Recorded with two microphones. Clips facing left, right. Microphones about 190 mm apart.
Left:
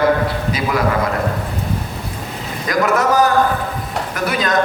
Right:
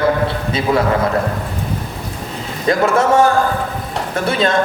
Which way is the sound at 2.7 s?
25° right (ahead or behind).